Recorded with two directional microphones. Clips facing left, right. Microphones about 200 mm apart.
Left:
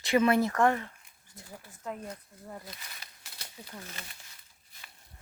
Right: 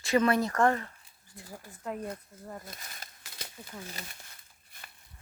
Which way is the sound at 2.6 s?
50° right (ahead or behind).